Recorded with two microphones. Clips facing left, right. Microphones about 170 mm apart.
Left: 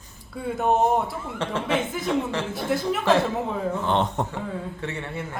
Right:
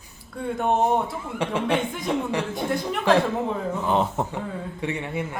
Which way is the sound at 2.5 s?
5° left (ahead or behind).